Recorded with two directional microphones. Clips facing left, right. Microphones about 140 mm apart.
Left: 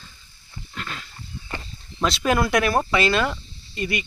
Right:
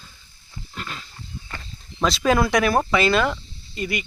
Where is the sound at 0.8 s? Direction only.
Centre (ahead or behind).